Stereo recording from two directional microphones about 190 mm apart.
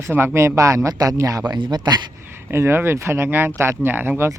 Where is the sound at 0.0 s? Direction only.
10° right (ahead or behind).